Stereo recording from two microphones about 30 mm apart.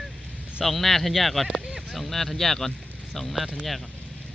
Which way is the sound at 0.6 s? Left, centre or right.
Centre.